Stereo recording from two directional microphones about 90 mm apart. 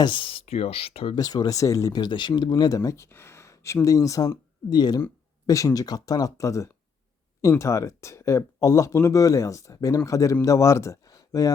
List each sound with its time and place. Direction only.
0.0 s speech: 65° left (ahead or behind); by 1.2 s 90° left
1.2 s speech: 45° left (ahead or behind)
2.0 s speech: 60° left (ahead or behind); by 11.5 s 40° left (ahead or behind)